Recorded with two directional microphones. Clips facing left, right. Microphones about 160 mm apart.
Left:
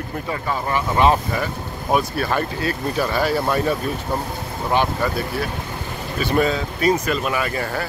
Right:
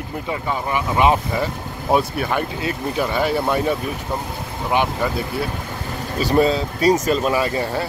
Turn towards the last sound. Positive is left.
turn(degrees=-25)  # may be behind; listen again after turning